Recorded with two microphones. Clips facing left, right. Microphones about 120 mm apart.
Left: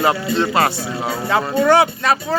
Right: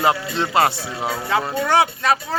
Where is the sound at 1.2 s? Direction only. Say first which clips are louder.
Left 6 dB; 50° left (ahead or behind).